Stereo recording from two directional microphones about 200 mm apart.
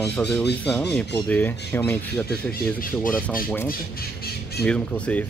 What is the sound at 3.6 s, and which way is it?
Speech, 50° left (ahead or behind).